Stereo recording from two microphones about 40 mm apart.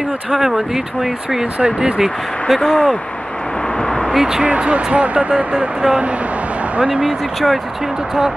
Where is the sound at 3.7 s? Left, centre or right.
Centre.